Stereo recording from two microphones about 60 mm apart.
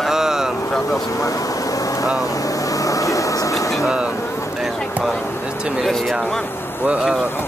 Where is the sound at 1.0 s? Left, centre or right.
Left.